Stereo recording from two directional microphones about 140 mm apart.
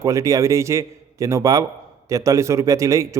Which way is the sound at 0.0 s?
25° right (ahead or behind).